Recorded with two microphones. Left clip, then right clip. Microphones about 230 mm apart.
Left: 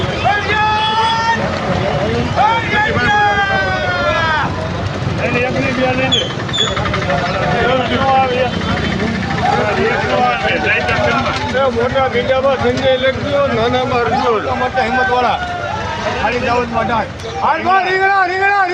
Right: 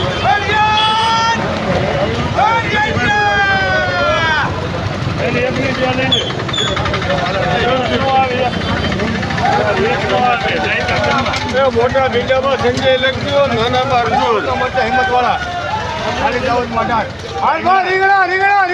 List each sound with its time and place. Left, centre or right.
0.5 s a sound: right
2.4 s vehicle: right
4.2 s boat: right
11.5 s speech: right
14.8 s a man's voice: centre
16.5 s a man's voice: centre